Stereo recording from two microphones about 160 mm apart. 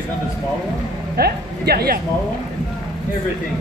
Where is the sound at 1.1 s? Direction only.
75° right (ahead or behind).